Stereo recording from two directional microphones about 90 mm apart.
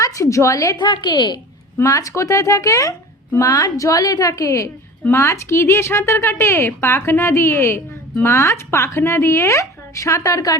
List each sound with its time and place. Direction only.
0.0 s a woman's voice: 35° left (ahead or behind)
0.8 s a woman's voice: 55° left (ahead or behind)
1.8 s a woman's voice: 35° left (ahead or behind)